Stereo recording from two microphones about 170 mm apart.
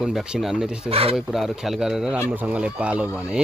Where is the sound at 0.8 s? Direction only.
35° right (ahead or behind).